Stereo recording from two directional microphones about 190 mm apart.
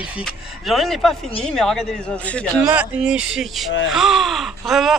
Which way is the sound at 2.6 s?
5° right (ahead or behind).